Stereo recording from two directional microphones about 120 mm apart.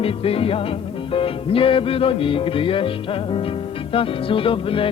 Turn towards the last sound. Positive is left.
turn(degrees=50)  # may be behind; listen again after turning